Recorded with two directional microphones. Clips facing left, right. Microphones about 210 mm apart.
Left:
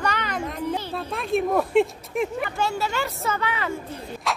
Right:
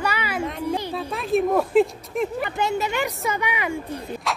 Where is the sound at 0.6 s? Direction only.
15° right (ahead or behind).